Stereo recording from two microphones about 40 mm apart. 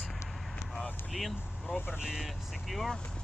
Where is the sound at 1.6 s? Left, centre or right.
Left.